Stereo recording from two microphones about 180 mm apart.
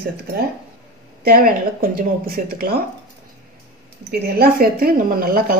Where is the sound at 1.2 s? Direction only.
55° right (ahead or behind).